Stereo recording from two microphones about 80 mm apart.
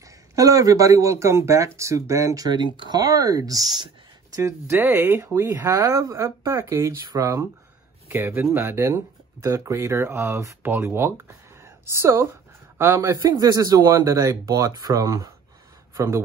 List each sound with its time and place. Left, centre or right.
0.4 s speech: right
4.4 s speech: right
8.1 s speech: right
15.9 s speech: right